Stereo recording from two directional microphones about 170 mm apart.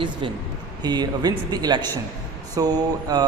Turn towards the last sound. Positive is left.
turn(degrees=-25)  # may be behind; listen again after turning